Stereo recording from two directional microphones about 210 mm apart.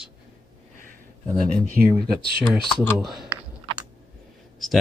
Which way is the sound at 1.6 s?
45° right (ahead or behind).